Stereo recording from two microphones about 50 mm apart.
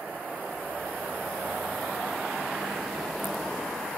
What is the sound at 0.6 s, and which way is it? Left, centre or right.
Vehicle, right.